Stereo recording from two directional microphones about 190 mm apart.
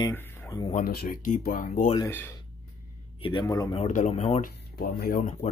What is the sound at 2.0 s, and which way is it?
Speech, 10° left (ahead or behind).